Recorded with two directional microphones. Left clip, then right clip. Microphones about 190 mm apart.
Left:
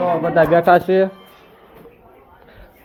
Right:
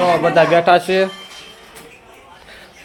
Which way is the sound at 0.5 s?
15° left (ahead or behind).